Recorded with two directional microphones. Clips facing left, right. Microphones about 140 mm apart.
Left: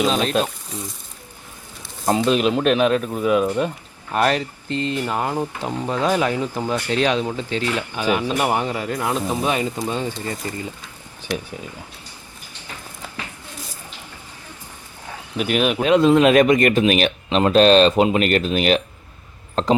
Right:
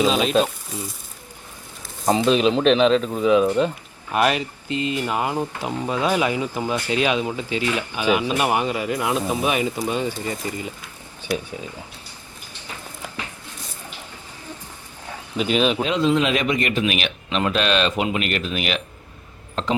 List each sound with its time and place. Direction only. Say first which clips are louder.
0.0 s speech: right 1 dB; 5° right (ahead or behind)
2.0 s speech: even; 5° left (ahead or behind)
4.1 s speech: left 1 dB; 10° right (ahead or behind)
15.4 s speech: even; 10° left (ahead or behind)
15.8 s speech: left 6 dB; 55° left (ahead or behind); by 19.7 s 35° left (ahead or behind)